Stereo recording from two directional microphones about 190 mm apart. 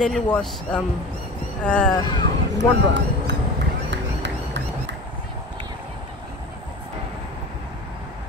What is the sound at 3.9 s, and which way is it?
Run, 70° right (ahead or behind).